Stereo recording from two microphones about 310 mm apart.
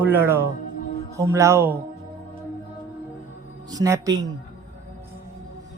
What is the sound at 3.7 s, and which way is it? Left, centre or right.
Speech, centre.